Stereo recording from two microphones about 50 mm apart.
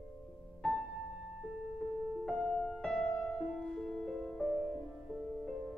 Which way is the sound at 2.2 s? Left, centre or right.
Centre.